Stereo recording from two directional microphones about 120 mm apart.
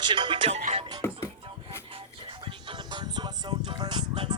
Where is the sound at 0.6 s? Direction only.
80° right.